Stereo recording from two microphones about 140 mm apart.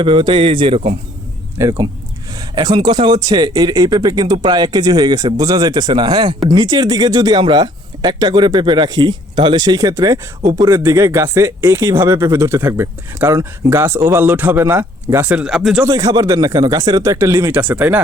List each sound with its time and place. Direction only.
0.0 s speech: 35° right (ahead or behind)
1.5 s speech: 20° right (ahead or behind)
2.6 s speech: 35° right (ahead or behind); by 15.8 s 5° right (ahead or behind)
15.9 s speech: 25° right (ahead or behind)